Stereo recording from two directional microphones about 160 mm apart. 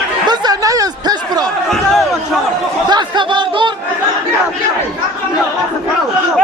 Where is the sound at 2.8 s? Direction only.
25° right (ahead or behind).